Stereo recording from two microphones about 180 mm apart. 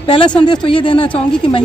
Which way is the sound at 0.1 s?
25° left (ahead or behind).